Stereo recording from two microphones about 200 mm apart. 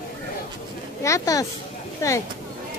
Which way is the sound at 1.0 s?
15° left (ahead or behind).